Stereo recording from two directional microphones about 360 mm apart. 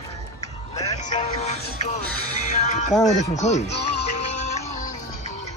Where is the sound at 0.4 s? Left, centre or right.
Centre.